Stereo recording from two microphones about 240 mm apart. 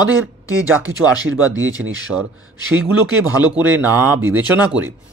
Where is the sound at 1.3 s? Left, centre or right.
Right.